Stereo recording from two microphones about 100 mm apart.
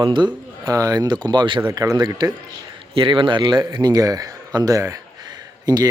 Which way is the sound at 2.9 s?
60° right (ahead or behind).